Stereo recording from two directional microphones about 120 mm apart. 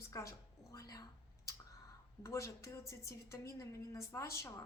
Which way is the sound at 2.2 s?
25° left (ahead or behind).